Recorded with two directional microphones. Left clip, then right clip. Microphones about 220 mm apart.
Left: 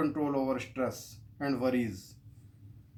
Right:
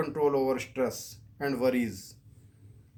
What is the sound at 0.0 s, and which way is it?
Speech, 45° right (ahead or behind).